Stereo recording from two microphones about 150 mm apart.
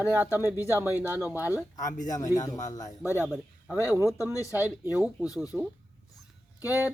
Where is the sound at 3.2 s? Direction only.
5° right (ahead or behind).